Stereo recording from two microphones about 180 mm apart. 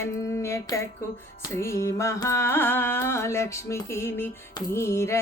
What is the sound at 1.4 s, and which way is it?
Music, 15° left (ahead or behind).